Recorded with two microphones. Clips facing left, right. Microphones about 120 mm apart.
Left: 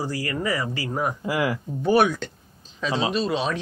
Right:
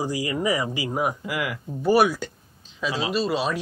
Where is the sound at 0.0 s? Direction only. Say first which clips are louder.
Right 2 dB; 15° right (ahead or behind).